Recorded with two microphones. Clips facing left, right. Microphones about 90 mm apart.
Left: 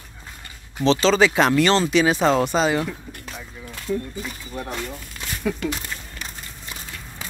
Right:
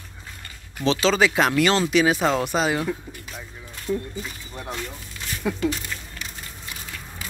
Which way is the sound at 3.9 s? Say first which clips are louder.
Left 1 dB; 5° right (ahead or behind).